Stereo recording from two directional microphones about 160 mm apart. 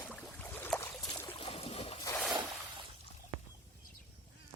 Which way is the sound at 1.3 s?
35° left (ahead or behind).